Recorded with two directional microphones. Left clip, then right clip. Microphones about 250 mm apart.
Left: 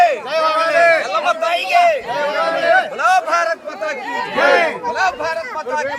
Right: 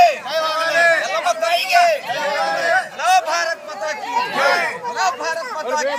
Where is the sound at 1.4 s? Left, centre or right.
Centre.